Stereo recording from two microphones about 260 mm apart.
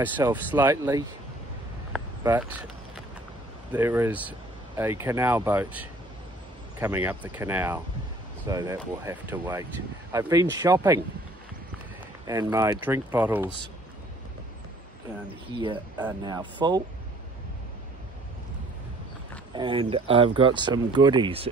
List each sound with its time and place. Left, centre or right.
0.0 s speech: centre
2.2 s speech: centre
3.7 s speech: centre
12.3 s speech: centre
15.5 s speech: centre
19.5 s speech: centre